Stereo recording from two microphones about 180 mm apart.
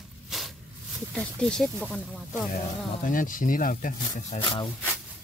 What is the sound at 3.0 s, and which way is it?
Speech, 50° left (ahead or behind).